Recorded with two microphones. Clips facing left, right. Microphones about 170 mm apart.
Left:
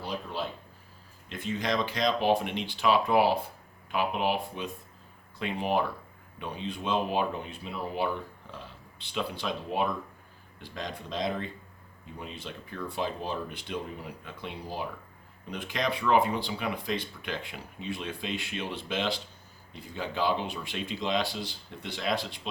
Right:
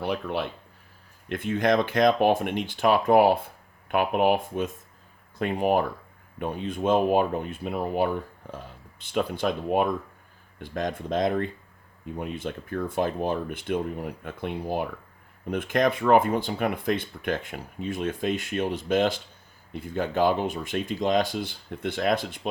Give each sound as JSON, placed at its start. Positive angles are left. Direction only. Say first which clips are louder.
{"t": 0.0, "sound": "speech", "louder": "right 6 dB", "side_deg": -65}